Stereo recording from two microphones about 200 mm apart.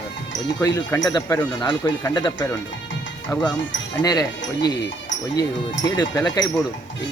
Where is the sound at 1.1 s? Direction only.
20° left (ahead or behind).